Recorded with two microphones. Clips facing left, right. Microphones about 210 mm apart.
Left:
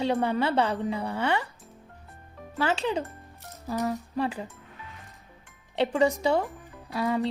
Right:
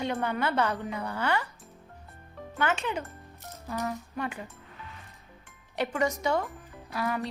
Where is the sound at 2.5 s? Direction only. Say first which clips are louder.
Left 3 dB; 30° left (ahead or behind).